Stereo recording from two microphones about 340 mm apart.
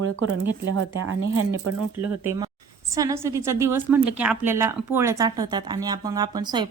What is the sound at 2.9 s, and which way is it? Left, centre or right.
A woman's voice, centre.